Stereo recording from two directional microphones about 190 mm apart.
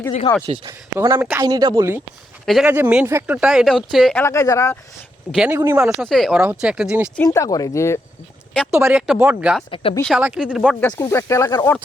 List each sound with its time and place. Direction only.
0.4 s speech: 30° right (ahead or behind)
0.7 s speech: 15° right (ahead or behind)
2.5 s speech: 5° right (ahead or behind)
4.2 s speech: 15° left (ahead or behind)
5.3 s speech: 5° right (ahead or behind)
7.2 s speech: 15° left (ahead or behind)
8.7 s speech: 10° right (ahead or behind)
9.6 s speech: 25° left (ahead or behind)
10.2 s speech: 10° right (ahead or behind)
10.7 s speech: 5° left (ahead or behind)